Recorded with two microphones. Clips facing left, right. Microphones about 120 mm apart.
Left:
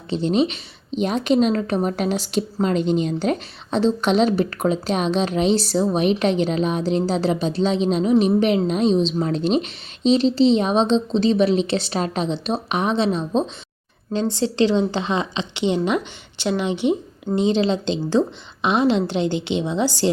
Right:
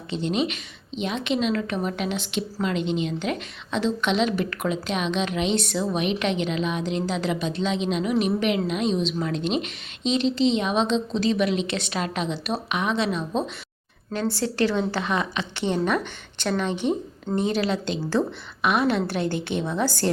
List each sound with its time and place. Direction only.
0.1 s a woman's voice: 35° left (ahead or behind); by 20.1 s 15° left (ahead or behind)